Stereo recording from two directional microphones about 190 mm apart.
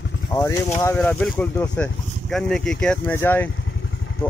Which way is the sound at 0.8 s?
10° left (ahead or behind).